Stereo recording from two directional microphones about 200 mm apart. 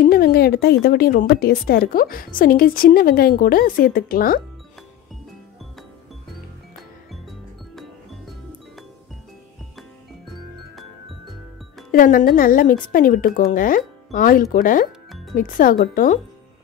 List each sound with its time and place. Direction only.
0.0 s speech: 50° left (ahead or behind)
7.1 s music: centre (ahead or behind)
11.9 s speech: 45° left (ahead or behind)
14.9 s music: centre (ahead or behind)
15.3 s speech: 45° left (ahead or behind)